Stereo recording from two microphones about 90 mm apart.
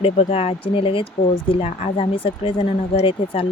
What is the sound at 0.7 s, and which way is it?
Speech, 80° left.